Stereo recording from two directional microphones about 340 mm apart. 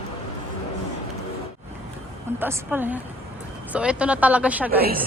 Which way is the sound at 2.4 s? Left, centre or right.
Centre.